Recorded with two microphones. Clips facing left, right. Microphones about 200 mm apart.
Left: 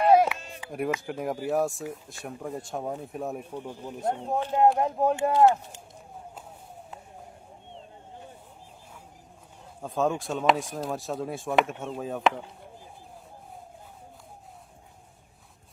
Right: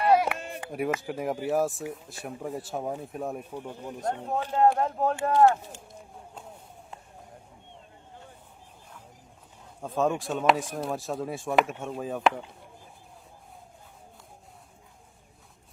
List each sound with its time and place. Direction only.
0.3 s a sound: 55° right (ahead or behind)
0.9 s speech: centre (ahead or behind); by 5.5 s 15° left (ahead or behind)
9.8 s speech: centre (ahead or behind)